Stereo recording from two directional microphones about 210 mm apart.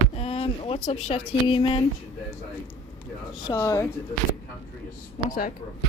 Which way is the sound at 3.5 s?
15° left (ahead or behind).